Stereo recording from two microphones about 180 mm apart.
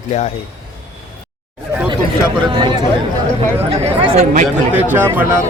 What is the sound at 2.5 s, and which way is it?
Speech, 25° right (ahead or behind).